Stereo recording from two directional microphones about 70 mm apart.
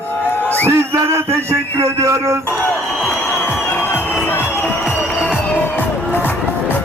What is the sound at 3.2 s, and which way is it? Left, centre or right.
Music, left.